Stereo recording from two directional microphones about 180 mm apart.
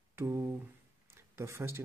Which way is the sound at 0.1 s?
15° right (ahead or behind).